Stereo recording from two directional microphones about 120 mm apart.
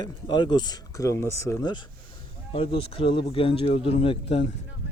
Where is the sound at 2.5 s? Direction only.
50° left (ahead or behind).